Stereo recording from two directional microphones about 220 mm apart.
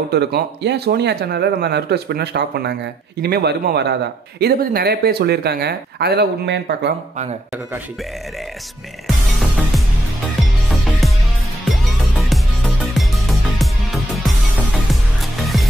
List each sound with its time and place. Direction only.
0.1 s speech: 50° right (ahead or behind)
9.0 s music: centre (ahead or behind)
15.4 s music: centre (ahead or behind)